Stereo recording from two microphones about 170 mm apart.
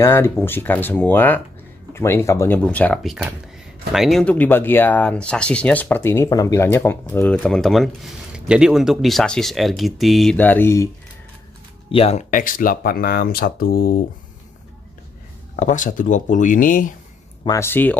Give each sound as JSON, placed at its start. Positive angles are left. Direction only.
{"t": 0.0, "sound": "speech", "side_deg": 15}
{"t": 11.9, "sound": "speech", "side_deg": 35}
{"t": 15.5, "sound": "speech", "side_deg": 50}
{"t": 17.5, "sound": "speech", "side_deg": 15}